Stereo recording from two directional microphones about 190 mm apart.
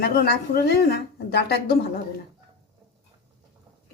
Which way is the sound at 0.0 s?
55° left (ahead or behind).